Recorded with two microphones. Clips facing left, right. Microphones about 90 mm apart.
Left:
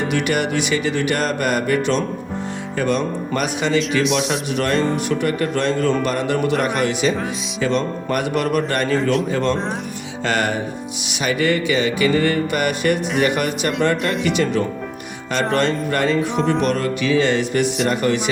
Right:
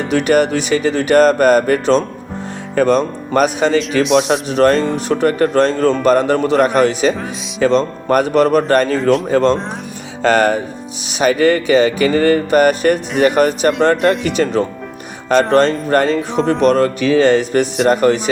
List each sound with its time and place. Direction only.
0.1 s music: 40° right (ahead or behind)
4.0 s speech: centre (ahead or behind)
4.3 s music: 35° right (ahead or behind)
15.4 s music: 35° right (ahead or behind)